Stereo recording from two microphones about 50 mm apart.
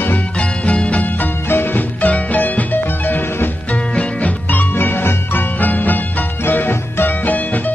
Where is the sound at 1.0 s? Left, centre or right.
Left.